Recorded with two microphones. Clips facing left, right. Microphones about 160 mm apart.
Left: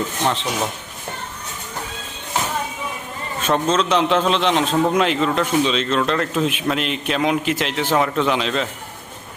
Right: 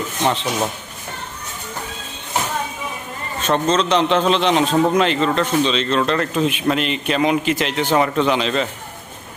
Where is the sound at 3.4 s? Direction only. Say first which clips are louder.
Right 1 dB; 5° left (ahead or behind).